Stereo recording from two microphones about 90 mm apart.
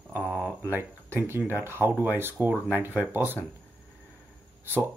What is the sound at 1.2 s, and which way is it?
Speech, 25° right (ahead or behind).